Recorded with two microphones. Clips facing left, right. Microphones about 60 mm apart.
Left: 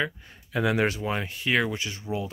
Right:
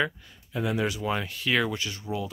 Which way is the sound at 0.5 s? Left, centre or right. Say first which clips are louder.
Left 4 dB; left.